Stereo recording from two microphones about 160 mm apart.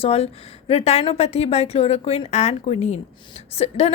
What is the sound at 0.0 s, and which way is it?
A woman's voice, 40° left (ahead or behind).